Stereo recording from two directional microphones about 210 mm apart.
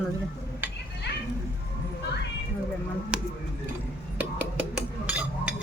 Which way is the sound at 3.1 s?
5° right (ahead or behind).